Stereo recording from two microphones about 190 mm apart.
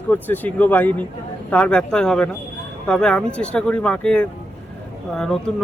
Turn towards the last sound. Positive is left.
turn(degrees=0)  # may be behind; listen again after turning